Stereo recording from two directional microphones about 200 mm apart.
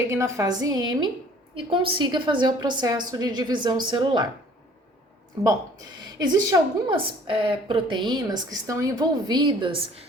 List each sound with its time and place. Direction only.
0.0 s a woman's voice: 15° right (ahead or behind)
6.1 s a woman's voice: 20° right (ahead or behind)